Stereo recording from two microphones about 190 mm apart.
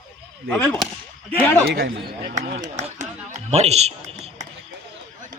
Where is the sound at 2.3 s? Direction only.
40° right (ahead or behind).